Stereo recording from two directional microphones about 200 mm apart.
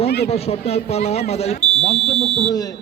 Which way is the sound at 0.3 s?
30° left (ahead or behind).